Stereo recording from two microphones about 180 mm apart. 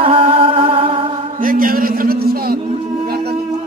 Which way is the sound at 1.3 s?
50° right (ahead or behind).